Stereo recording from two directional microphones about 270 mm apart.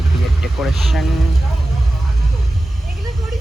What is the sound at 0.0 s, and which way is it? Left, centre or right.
Speech, centre.